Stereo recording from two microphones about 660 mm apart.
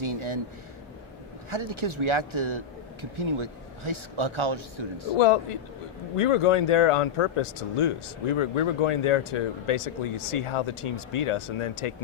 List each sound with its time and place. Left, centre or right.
0.0 s speech: right
1.5 s speech: right
5.1 s speech: left